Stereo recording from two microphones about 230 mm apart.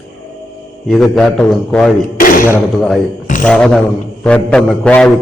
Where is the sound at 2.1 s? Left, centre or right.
Left.